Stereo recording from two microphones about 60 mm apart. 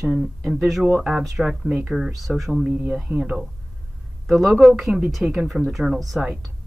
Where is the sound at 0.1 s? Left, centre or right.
Centre.